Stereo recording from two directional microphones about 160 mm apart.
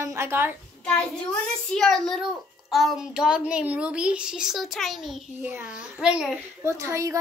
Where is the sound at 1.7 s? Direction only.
Centre (ahead or behind).